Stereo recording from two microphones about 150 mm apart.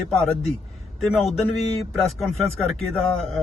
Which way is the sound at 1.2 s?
45° left (ahead or behind).